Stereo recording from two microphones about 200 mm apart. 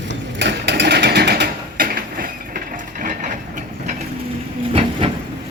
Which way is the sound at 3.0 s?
40° right (ahead or behind).